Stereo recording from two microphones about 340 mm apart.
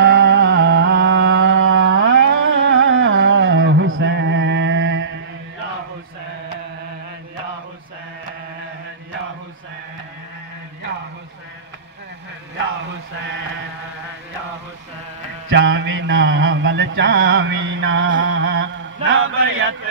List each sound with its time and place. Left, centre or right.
0.0 s music: right
15.5 s mantra: right